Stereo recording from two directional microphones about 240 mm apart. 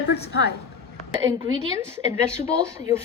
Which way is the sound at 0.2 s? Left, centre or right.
Left.